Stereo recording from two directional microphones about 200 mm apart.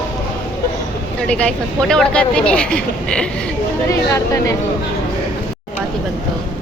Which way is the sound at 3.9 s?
15° left (ahead or behind).